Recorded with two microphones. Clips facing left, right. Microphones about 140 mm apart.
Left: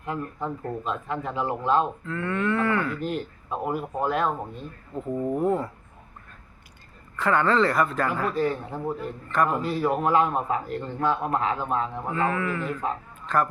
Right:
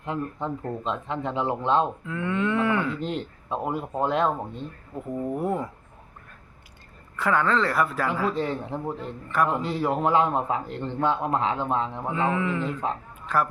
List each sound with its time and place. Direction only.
0.0 s a man's voice: 25° right (ahead or behind)
5.3 s speech: 10° right (ahead or behind)
7.2 s speech: 5° right (ahead or behind)
8.3 s a man's voice: 20° right (ahead or behind)
13.2 s speech: 10° right (ahead or behind)